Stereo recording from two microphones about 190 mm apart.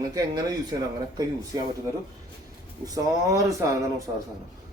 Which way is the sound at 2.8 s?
20° right (ahead or behind).